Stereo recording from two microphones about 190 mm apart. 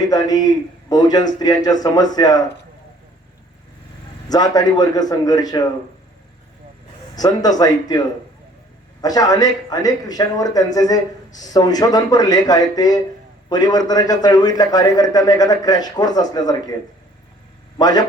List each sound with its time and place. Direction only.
0.1 s speech: 20° left (ahead or behind)
4.3 s speech: 20° left (ahead or behind)
7.2 s speech: 20° left (ahead or behind)
17.7 s speech: 20° left (ahead or behind)